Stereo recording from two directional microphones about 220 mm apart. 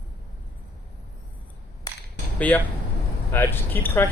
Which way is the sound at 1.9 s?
20° left (ahead or behind).